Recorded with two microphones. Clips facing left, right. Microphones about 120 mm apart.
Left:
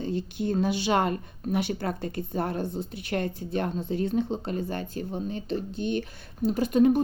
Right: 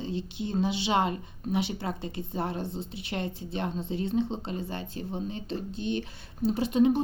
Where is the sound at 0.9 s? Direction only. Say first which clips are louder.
Left 2 dB; 55° left (ahead or behind).